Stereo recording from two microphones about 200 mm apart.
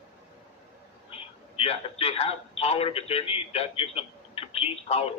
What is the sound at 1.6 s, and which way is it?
A man's voice, 30° left (ahead or behind).